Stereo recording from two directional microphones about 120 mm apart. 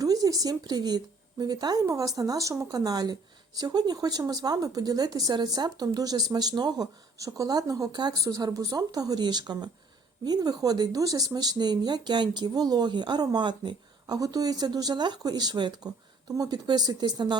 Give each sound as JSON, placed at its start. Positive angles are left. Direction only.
{"t": 0.0, "sound": "a woman's voice", "side_deg": -30}